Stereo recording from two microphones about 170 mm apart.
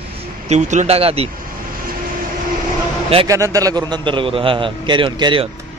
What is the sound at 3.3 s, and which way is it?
A man's voice, 20° right (ahead or behind).